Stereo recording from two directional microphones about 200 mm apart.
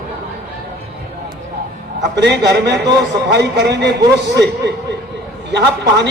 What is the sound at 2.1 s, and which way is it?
A man's voice, 60° right (ahead or behind).